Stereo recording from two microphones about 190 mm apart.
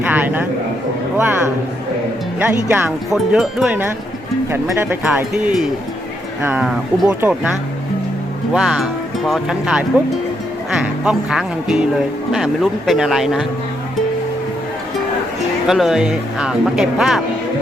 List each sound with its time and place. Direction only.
0.0 s speech: 10° right (ahead or behind)
2.4 s speech: 10° right (ahead or behind)
8.5 s speech: centre (ahead or behind)
15.6 s speech: centre (ahead or behind)